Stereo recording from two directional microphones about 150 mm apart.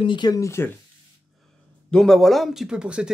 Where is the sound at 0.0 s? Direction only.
30° left (ahead or behind).